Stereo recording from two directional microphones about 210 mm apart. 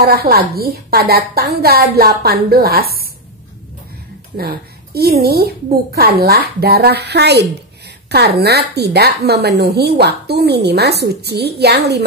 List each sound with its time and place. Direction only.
0.0 s a woman's voice: 45° right (ahead or behind)
4.4 s a woman's voice: 45° right (ahead or behind)